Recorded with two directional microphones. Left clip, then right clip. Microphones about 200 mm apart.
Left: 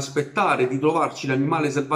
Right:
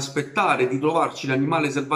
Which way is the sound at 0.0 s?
Centre (ahead or behind).